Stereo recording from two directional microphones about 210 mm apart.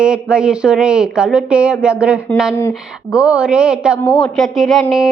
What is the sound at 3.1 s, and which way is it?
Speech, 5° right (ahead or behind).